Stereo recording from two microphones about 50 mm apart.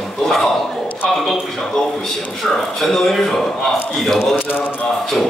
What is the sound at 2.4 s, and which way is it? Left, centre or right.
A man's voice, centre.